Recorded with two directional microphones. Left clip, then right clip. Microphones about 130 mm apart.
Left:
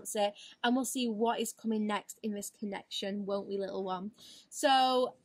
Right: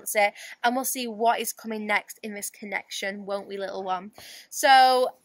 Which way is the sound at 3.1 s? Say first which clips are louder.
Right 4 dB; centre (ahead or behind).